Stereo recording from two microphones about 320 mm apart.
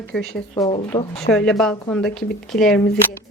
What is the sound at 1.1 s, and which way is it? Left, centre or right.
Speech, centre.